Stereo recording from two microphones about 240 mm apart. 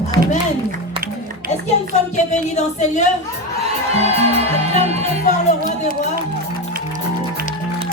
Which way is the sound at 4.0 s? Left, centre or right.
Right.